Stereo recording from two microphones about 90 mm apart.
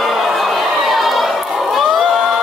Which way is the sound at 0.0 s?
Centre (ahead or behind).